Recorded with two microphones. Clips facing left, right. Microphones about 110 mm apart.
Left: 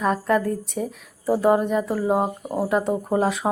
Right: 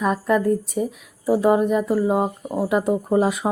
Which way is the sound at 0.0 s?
Centre (ahead or behind).